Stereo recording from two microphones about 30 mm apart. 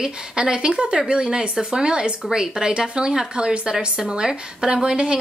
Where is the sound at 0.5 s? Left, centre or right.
Right.